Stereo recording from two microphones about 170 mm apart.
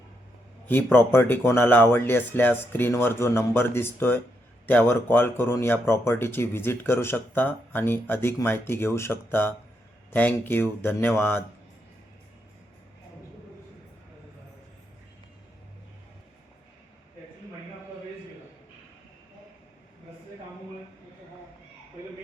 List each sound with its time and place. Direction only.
0.7 s speech: 10° left (ahead or behind)